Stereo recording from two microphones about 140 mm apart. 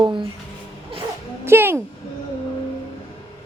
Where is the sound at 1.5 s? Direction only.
15° right (ahead or behind).